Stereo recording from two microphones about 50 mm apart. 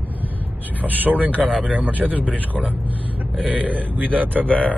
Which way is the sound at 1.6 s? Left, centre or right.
Right.